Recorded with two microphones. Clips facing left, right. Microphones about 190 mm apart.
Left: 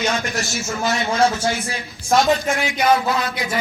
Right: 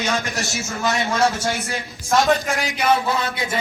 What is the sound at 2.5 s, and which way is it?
Speech, 35° right (ahead or behind).